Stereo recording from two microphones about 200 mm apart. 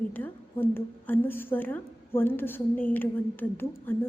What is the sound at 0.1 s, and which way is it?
A woman's voice, 10° left (ahead or behind).